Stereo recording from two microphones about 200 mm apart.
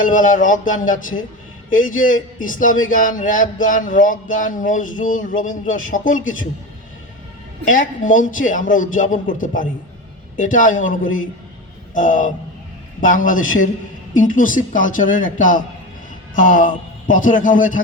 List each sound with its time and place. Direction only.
0.0 s a man's voice: 40° left (ahead or behind)
7.6 s a man's voice: 40° left (ahead or behind)
11.9 s a man's voice: 40° left (ahead or behind)